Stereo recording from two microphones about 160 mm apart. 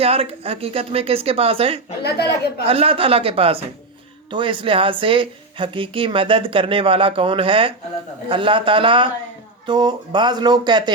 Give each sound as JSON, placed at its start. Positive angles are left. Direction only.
{"t": 0.0, "sound": "speech", "side_deg": -35}
{"t": 2.0, "sound": "a woman's voice", "side_deg": 90}
{"t": 2.6, "sound": "speech", "side_deg": -35}